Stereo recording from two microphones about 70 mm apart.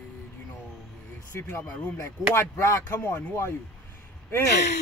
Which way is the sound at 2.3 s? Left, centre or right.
Left.